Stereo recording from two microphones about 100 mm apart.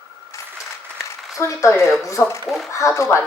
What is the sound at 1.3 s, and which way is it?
Speech, 30° left (ahead or behind).